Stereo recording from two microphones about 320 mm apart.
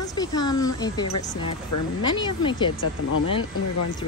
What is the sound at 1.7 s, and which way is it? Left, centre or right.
Speech, left.